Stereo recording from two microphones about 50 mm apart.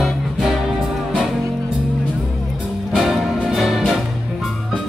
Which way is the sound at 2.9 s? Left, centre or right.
Centre.